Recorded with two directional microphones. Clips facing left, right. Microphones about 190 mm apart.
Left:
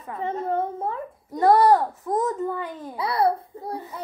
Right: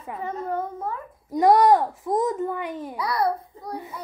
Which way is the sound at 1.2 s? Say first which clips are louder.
Even; 15° right (ahead or behind).